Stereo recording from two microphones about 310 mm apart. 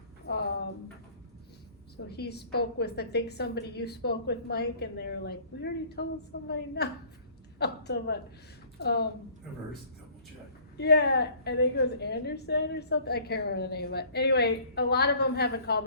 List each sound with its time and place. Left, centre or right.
0.3 s a sound: left
2.0 s a woman's voice: left
10.8 s a woman's voice: left